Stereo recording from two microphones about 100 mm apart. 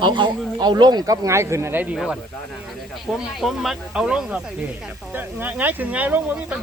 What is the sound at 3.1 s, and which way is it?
Speech, centre (ahead or behind).